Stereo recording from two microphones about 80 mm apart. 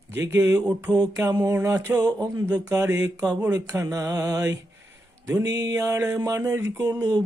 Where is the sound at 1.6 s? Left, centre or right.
Right.